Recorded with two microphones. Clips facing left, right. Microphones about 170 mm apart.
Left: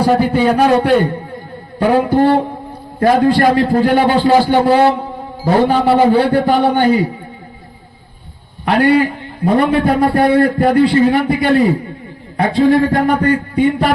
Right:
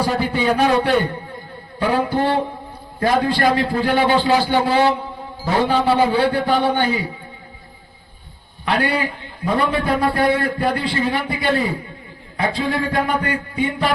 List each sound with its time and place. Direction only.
0.1 s a man's voice: 45° left (ahead or behind)
8.6 s a man's voice: 50° left (ahead or behind)
10.0 s a man's voice: 40° left (ahead or behind)